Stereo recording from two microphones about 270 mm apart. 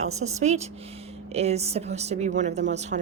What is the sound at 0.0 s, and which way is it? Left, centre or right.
Speech, right.